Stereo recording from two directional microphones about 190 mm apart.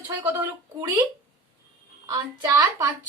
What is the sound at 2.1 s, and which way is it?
Speech, 15° right (ahead or behind).